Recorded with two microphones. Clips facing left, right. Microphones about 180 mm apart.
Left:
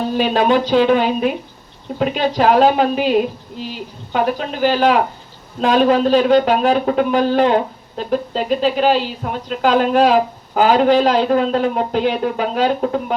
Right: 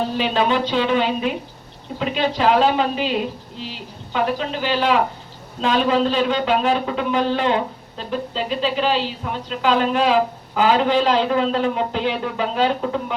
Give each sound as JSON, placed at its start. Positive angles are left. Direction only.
{"t": 0.2, "sound": "a woman's voice", "side_deg": 45}